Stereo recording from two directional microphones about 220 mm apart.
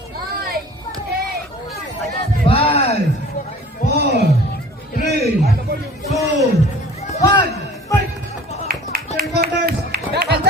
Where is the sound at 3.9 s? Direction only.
45° right (ahead or behind).